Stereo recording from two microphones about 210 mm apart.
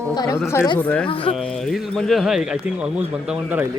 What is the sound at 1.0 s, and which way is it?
Speech, 25° left (ahead or behind).